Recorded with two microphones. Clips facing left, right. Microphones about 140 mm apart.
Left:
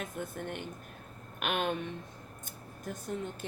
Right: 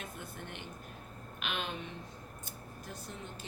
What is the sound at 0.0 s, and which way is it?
A woman's voice, 50° left (ahead or behind).